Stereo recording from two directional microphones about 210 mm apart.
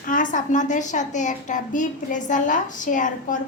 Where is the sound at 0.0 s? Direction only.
40° left (ahead or behind).